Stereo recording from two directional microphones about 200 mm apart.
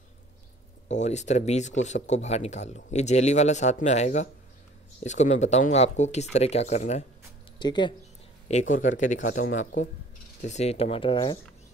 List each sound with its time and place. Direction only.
0.8 s speech: 35° left (ahead or behind)
7.5 s speech: 20° left (ahead or behind)
8.5 s speech: 40° left (ahead or behind)